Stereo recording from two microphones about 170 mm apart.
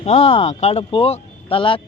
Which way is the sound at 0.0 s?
40° left (ahead or behind).